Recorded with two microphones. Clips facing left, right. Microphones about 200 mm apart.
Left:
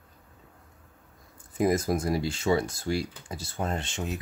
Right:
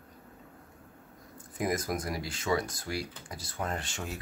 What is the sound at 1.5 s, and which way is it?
Speech, 25° left (ahead or behind).